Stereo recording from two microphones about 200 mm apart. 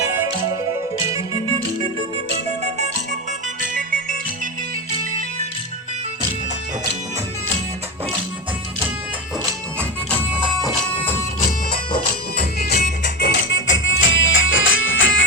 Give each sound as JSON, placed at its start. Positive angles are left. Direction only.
{"t": 0.2, "sound": "music", "side_deg": -20}
{"t": 2.3, "sound": "music", "side_deg": -35}
{"t": 9.4, "sound": "music", "side_deg": -20}
{"t": 10.2, "sound": "music", "side_deg": -5}
{"t": 10.9, "sound": "music", "side_deg": 10}
{"t": 12.5, "sound": "music", "side_deg": 55}